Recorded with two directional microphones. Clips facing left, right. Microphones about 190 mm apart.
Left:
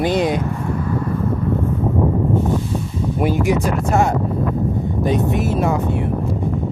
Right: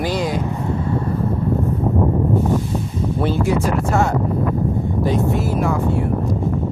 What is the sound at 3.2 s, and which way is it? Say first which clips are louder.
Speech: left 1 dB; 15° left (ahead or behind).